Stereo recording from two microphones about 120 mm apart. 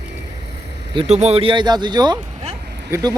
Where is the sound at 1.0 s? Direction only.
70° right (ahead or behind).